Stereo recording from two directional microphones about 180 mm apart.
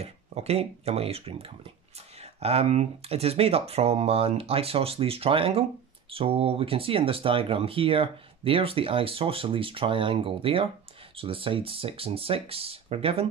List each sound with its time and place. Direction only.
0.0 s speech: 35° right (ahead or behind)